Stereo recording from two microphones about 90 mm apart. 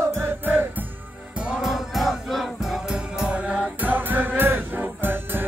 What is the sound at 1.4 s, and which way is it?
Music, 10° right (ahead or behind).